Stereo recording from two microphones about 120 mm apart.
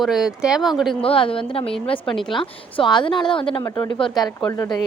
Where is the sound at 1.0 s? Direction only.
50° left (ahead or behind).